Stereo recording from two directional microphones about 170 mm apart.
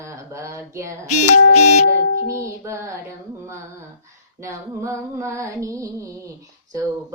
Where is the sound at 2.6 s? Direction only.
15° right (ahead or behind).